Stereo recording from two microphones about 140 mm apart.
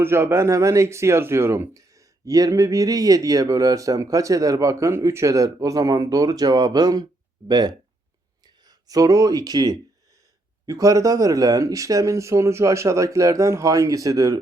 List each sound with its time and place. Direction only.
0.0 s speech: 20° right (ahead or behind)